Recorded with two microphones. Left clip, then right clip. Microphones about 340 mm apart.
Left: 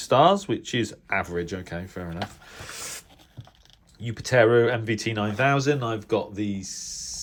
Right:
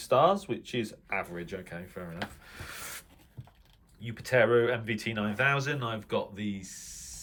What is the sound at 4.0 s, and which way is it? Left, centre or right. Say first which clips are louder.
Speech: left 6 dB; centre.